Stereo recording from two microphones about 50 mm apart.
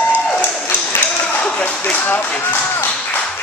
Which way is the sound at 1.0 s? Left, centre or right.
Left.